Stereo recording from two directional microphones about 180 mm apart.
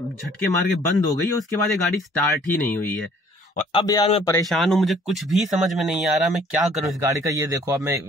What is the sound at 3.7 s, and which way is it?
Speech, 25° left (ahead or behind).